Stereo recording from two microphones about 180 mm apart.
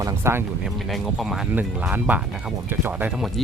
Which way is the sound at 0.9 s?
Centre (ahead or behind).